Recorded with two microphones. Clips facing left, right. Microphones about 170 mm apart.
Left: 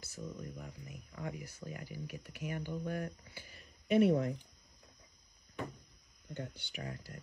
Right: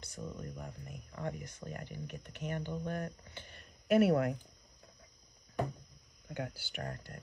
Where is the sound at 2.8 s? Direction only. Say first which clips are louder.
Even; 45° right (ahead or behind).